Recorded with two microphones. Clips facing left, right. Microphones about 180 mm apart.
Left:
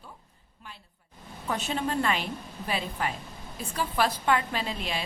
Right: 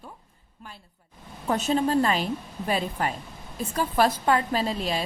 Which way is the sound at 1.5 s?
40° right (ahead or behind).